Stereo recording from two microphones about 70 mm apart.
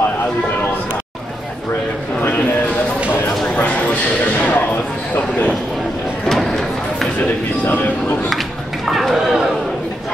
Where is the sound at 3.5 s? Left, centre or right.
Centre.